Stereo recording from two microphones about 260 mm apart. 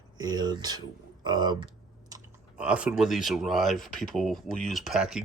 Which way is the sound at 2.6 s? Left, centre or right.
Centre.